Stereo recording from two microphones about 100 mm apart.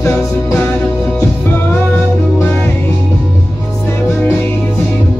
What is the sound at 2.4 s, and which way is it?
Music, 20° left (ahead or behind).